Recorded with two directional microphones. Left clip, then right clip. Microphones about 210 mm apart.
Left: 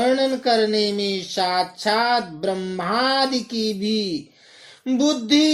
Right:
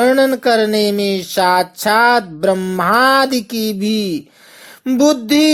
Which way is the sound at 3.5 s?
55° right (ahead or behind).